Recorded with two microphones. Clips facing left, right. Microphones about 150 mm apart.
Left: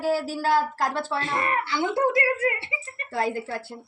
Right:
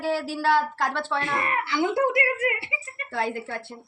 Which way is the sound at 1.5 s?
20° right (ahead or behind).